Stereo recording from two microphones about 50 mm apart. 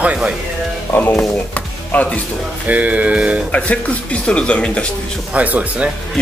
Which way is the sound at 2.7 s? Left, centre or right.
Right.